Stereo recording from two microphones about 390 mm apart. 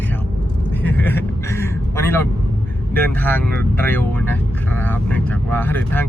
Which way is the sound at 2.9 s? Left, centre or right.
Centre.